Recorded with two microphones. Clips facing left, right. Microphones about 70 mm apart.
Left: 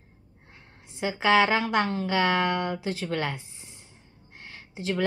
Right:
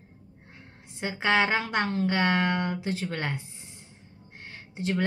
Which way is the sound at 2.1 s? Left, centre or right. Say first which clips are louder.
Left 3 dB; centre.